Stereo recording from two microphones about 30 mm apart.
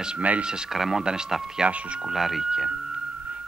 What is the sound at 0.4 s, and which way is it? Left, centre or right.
Speech, right.